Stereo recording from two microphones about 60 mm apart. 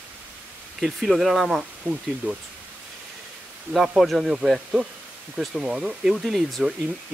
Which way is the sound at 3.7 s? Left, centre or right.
Centre.